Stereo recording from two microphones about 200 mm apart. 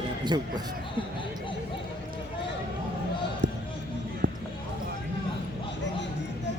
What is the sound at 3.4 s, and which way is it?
Basketball bounce, 60° right (ahead or behind).